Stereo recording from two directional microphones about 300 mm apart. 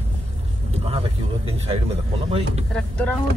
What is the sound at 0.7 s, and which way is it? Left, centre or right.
Vehicle, centre.